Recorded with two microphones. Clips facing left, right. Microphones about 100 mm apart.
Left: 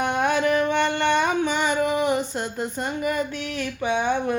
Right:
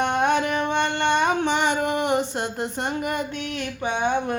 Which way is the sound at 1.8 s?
70° right (ahead or behind).